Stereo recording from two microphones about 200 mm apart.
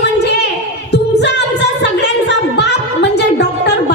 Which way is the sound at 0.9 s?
60° left (ahead or behind).